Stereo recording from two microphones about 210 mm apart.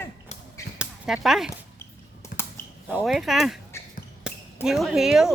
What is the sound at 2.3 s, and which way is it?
Computer keyboard, 40° left (ahead or behind).